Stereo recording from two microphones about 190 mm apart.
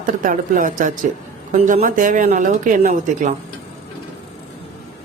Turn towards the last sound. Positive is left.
turn(degrees=-40)  # may be behind; listen again after turning